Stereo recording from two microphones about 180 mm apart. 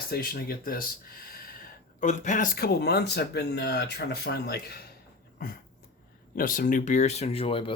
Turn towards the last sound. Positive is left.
turn(degrees=30)  # may be behind; listen again after turning